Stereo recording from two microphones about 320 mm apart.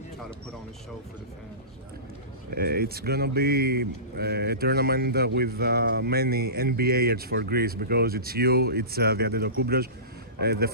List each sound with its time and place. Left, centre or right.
2.5 s speech: right